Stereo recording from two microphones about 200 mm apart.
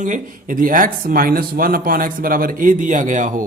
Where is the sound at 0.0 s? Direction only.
40° right (ahead or behind).